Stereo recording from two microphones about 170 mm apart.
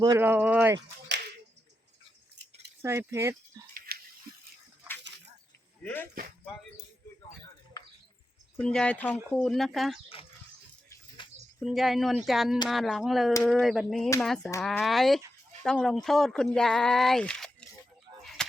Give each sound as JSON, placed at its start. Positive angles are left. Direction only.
{"t": 0.0, "sound": "speech", "side_deg": -20}
{"t": 0.3, "sound": "speech", "side_deg": -10}
{"t": 2.3, "sound": "scissors", "side_deg": -90}
{"t": 2.8, "sound": "speech", "side_deg": -15}
{"t": 3.9, "sound": "a sound", "side_deg": -65}
{"t": 5.8, "sound": "speech", "side_deg": 10}
{"t": 8.5, "sound": "speech", "side_deg": 5}
{"t": 11.2, "sound": "bird", "side_deg": 30}
{"t": 11.6, "sound": "speech", "side_deg": 0}
{"t": 18.2, "sound": "a sound", "side_deg": 0}